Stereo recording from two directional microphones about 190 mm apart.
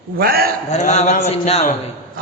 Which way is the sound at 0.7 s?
35° left (ahead or behind).